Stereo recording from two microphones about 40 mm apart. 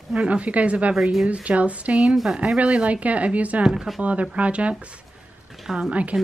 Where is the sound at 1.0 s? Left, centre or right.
Centre.